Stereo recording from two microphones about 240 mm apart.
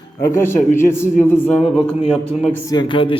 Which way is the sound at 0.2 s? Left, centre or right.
Centre.